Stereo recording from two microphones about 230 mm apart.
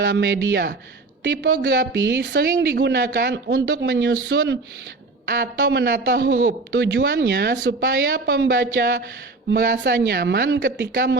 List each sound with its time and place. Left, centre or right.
0.0 s a man's voice: right